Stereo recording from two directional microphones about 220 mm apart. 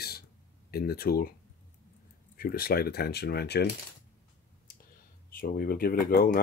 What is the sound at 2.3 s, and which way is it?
Speech, 40° left (ahead or behind).